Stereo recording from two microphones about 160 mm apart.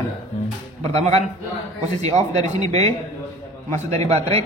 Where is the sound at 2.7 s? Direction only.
40° right (ahead or behind).